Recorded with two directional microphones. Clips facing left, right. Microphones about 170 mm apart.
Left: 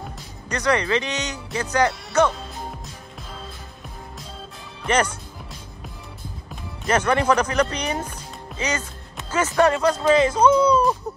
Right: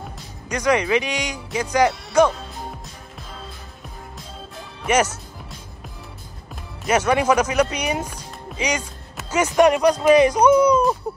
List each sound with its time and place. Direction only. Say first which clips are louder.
0.5 s speech: right 2 dB; 10° right (ahead or behind)
4.8 s speech: right 2 dB; 10° right (ahead or behind)
6.5 s speech: right 2 dB; 5° right (ahead or behind)